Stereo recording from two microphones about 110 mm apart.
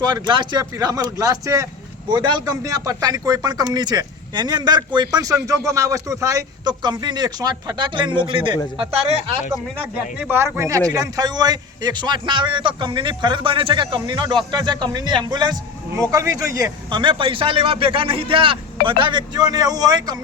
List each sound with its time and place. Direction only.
0.0 s speech: 45° right (ahead or behind)
0.6 s speech: 30° right (ahead or behind)
2.0 s speech: 45° right (ahead or behind); by 9.3 s 60° right (ahead or behind)
9.9 s speech: 15° right (ahead or behind); by 15.5 s 40° right (ahead or behind)
16.0 s speech: 30° right (ahead or behind)
16.9 s speech: 50° right (ahead or behind)